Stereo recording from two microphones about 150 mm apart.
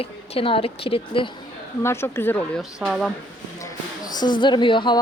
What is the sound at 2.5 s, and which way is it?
Speech, centre (ahead or behind).